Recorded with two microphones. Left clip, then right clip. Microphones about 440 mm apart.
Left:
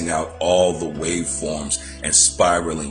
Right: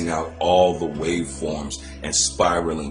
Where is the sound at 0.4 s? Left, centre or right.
Right.